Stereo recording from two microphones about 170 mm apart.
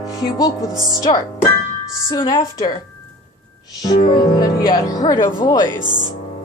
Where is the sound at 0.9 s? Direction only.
20° left (ahead or behind).